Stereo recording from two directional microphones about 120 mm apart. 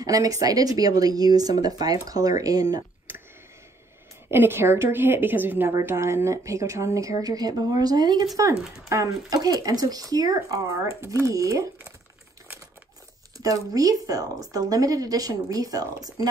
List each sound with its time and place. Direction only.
0.0 s speech: 30° right (ahead or behind)
4.3 s a woman's voice: 20° right (ahead or behind)
13.4 s speech: 30° right (ahead or behind)